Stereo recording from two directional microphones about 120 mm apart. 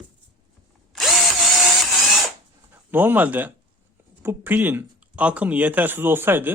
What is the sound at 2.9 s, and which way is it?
Speech, 15° right (ahead or behind).